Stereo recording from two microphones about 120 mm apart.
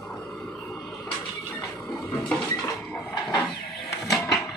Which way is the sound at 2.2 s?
10° left (ahead or behind).